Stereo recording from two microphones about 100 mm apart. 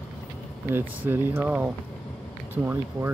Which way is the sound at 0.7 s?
20° right (ahead or behind).